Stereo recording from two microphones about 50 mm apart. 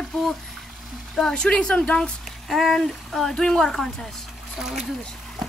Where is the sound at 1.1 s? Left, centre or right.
Centre.